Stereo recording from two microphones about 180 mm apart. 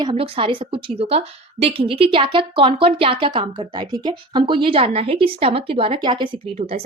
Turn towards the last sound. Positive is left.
turn(degrees=-35)  # may be behind; listen again after turning